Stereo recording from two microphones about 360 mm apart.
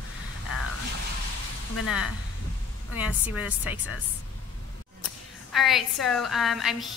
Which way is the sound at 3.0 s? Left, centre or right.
Centre.